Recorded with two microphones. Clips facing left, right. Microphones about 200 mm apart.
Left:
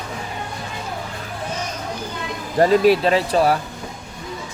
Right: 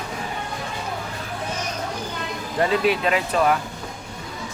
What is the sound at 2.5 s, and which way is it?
Speech, 40° left (ahead or behind).